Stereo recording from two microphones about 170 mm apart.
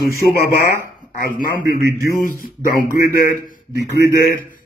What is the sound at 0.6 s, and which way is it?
A man's voice, 15° right (ahead or behind).